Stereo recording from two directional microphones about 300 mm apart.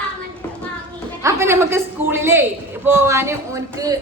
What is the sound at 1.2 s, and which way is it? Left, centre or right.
A man's voice, centre.